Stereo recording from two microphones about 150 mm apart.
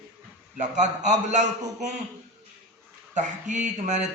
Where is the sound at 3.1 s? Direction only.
55° right (ahead or behind).